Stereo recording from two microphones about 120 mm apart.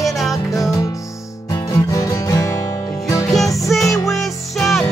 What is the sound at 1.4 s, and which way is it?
Music, 25° left (ahead or behind).